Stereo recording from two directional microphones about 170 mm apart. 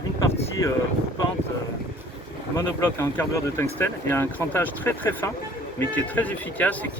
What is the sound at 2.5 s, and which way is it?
Speech, 15° left (ahead or behind).